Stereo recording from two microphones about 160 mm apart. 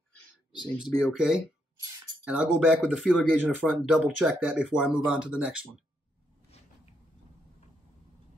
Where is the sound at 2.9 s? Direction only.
Centre (ahead or behind).